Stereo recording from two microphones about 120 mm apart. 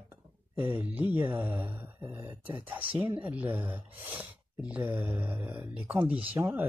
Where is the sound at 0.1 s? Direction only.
15° right (ahead or behind).